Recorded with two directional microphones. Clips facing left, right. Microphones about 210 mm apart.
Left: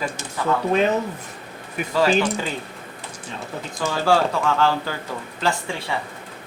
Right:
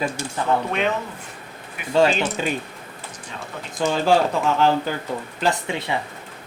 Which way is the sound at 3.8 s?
20° right (ahead or behind).